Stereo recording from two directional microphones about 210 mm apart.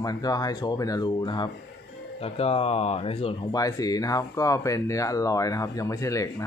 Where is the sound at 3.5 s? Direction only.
15° left (ahead or behind).